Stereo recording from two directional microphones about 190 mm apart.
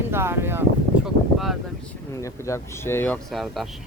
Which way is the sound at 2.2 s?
15° left (ahead or behind).